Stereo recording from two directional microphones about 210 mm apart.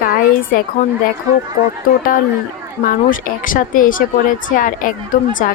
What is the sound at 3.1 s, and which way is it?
A woman's voice, 40° left (ahead or behind).